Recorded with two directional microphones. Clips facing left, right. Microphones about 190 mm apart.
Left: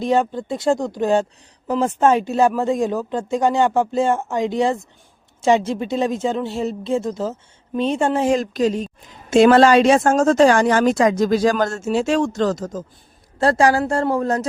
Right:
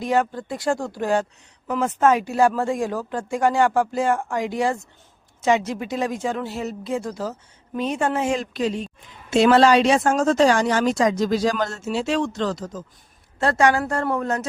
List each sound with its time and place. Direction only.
0.0 s a woman's voice: 25° left (ahead or behind); by 12.8 s 45° left (ahead or behind)
13.4 s a woman's voice: 35° left (ahead or behind)